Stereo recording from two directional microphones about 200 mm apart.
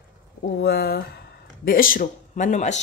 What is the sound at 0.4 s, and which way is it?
Speech, 55° left (ahead or behind).